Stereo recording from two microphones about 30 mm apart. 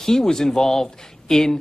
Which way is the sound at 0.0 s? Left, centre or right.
Centre.